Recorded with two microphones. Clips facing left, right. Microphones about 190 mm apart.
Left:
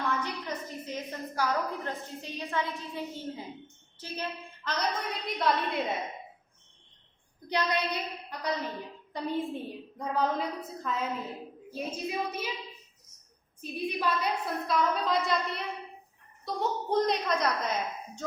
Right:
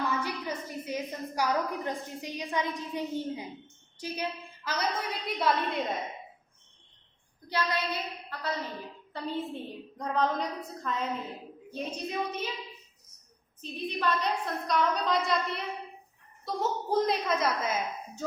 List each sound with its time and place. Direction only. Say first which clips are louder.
0.2 s a woman's voice: right 1 dB; 10° right (ahead or behind)
7.4 s a woman's voice: left 1 dB; 20° left (ahead or behind)
13.6 s a woman's voice: left 1 dB; 10° left (ahead or behind); by 18.3 s 5° right (ahead or behind)